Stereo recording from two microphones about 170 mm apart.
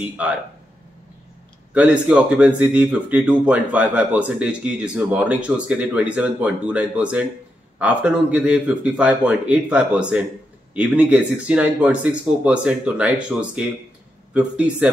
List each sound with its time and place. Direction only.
0.0 s speech: 5° right (ahead or behind)
1.7 s speech: 10° right (ahead or behind)